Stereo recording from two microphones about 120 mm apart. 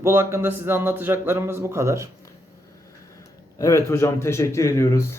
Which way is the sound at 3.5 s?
25° left (ahead or behind).